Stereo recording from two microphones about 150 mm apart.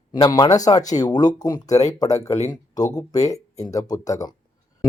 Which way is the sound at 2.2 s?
45° left (ahead or behind).